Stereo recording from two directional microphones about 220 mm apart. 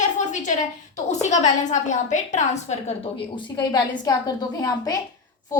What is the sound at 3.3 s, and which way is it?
A woman's voice, 20° left (ahead or behind).